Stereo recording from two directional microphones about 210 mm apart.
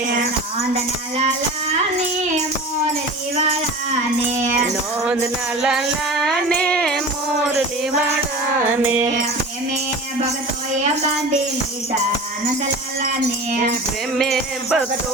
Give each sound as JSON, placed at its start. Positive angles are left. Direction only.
{"t": 4.4, "sound": "music", "side_deg": -35}
{"t": 6.2, "sound": "music", "side_deg": 5}
{"t": 8.8, "sound": "music", "side_deg": -5}
{"t": 14.2, "sound": "music", "side_deg": 0}